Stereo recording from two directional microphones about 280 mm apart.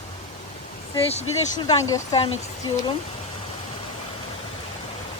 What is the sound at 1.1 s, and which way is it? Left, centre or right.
Speech, centre.